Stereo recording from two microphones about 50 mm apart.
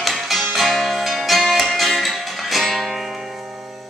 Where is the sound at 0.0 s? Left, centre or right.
Centre.